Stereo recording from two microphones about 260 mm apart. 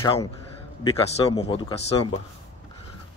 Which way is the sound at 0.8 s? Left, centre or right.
Left.